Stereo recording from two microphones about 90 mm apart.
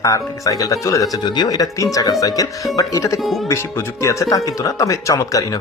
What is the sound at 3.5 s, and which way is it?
Speech, 35° left (ahead or behind).